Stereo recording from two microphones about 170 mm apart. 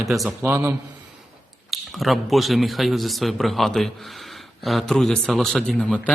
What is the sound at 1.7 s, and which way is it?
Speech, centre (ahead or behind).